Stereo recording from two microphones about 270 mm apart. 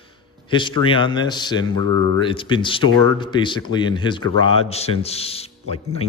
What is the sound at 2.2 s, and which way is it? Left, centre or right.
Speech, centre.